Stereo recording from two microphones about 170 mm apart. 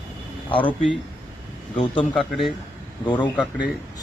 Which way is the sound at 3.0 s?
25° left (ahead or behind).